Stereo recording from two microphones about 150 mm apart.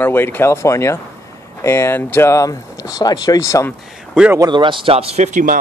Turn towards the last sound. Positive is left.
turn(degrees=-60)  # may be behind; listen again after turning